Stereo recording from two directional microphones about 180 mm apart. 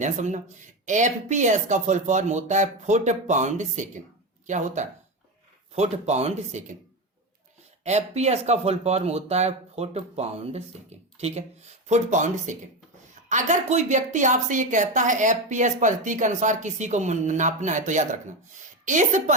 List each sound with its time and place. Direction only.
0.0 s a woman's voice: 40° right (ahead or behind)
7.9 s a woman's voice: 40° right (ahead or behind)